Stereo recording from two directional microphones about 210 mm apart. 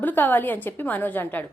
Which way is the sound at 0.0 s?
10° left (ahead or behind).